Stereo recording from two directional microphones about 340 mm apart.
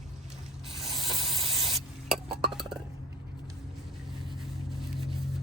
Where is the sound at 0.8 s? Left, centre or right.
Centre.